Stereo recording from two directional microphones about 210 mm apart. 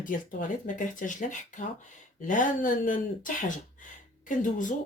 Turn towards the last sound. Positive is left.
turn(degrees=35)  # may be behind; listen again after turning